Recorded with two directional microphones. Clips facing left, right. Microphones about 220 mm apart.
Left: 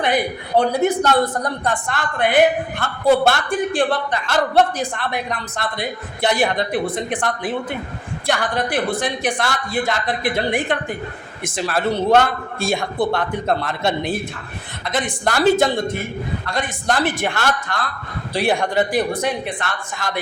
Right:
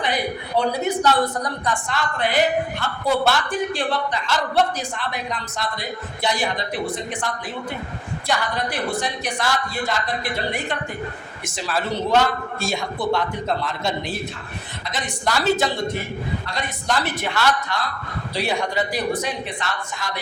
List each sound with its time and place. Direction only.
0.0 s a woman's voice: 50° left (ahead or behind)